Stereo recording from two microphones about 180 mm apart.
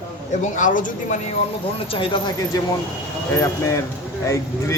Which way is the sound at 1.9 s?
30° left (ahead or behind).